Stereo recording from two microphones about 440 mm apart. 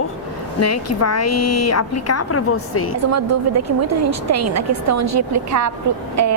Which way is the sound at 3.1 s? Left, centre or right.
Right.